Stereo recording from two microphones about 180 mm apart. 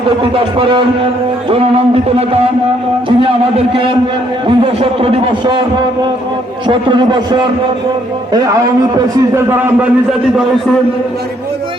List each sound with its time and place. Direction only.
0.3 s a man's voice: 30° right (ahead or behind)
1.5 s a sound: 30° right (ahead or behind)
4.4 s a man's voice: 30° right (ahead or behind)
6.7 s a man's voice: 25° right (ahead or behind); by 10.4 s 5° right (ahead or behind)